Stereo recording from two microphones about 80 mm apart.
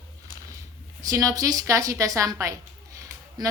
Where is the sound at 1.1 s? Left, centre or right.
Right.